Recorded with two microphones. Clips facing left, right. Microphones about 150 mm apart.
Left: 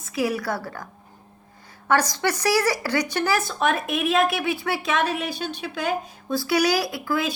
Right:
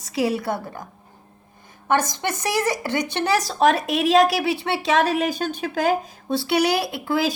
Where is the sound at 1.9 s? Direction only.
20° right (ahead or behind).